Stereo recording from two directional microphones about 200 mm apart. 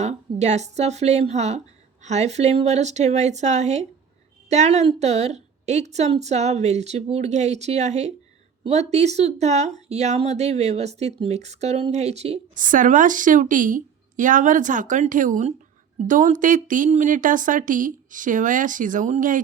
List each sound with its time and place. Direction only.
0.0 s speech: 35° right (ahead or behind)